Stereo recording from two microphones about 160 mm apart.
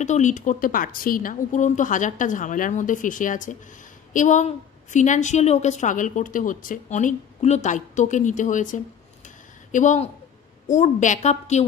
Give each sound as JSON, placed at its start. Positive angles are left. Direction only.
{"t": 0.0, "sound": "a woman's voice", "side_deg": 50}